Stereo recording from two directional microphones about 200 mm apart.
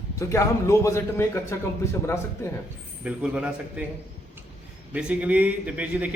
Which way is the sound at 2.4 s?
15° left (ahead or behind).